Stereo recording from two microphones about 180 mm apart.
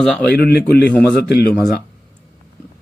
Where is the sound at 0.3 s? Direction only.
60° left (ahead or behind).